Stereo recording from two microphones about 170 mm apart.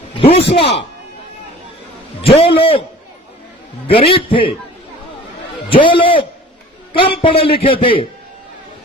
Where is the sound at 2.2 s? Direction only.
35° left (ahead or behind).